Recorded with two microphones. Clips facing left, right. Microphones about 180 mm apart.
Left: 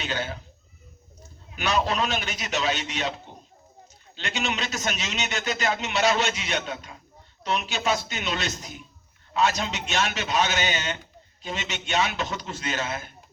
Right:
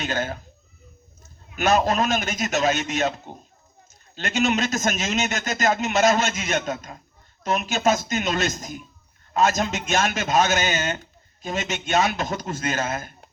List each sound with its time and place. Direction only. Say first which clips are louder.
0.0 s a man's voice: right 4 dB; 45° right (ahead or behind)
1.5 s a man's voice: right 5 dB; 45° right (ahead or behind)